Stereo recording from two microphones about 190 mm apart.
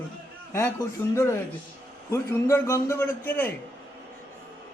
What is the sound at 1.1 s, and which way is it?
A man's voice, 15° left (ahead or behind).